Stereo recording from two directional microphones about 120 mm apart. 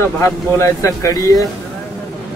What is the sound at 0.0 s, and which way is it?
Speech, 25° left (ahead or behind).